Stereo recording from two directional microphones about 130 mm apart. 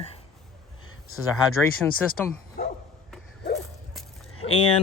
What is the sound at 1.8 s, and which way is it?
Speech, 10° left (ahead or behind).